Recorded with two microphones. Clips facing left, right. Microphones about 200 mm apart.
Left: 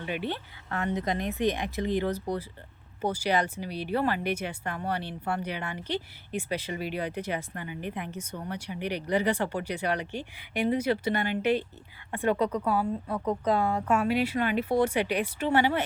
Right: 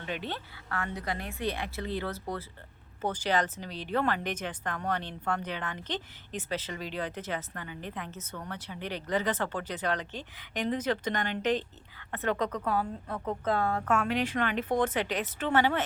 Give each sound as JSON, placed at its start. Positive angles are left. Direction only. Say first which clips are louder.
{"t": 0.0, "sound": "a woman's voice", "louder": "left 4 dB", "side_deg": 10}